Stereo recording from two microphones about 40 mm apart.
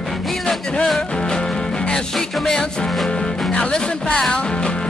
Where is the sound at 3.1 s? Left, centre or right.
Centre.